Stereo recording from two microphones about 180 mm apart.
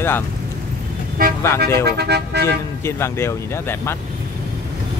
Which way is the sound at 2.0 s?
65° right (ahead or behind).